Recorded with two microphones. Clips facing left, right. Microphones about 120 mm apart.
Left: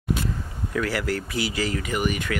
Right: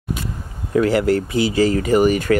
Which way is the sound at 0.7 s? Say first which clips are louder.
Right 10 dB; 25° right (ahead or behind).